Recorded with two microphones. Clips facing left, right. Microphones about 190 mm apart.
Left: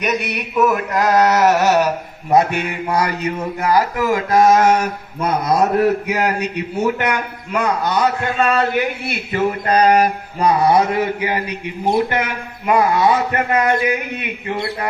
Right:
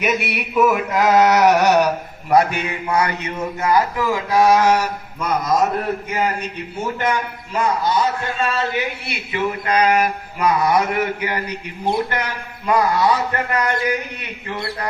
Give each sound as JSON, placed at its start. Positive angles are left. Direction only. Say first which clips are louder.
{"t": 0.0, "sound": "speech", "louder": "even", "side_deg": -5}
{"t": 2.3, "sound": "a man's voice", "louder": "left 1 dB", "side_deg": 20}
{"t": 2.9, "sound": "a man's voice", "louder": "left 1 dB", "side_deg": 35}